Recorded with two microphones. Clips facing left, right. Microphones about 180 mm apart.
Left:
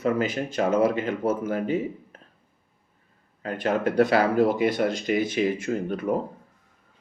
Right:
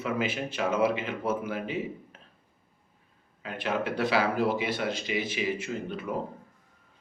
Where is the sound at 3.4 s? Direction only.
45° left (ahead or behind).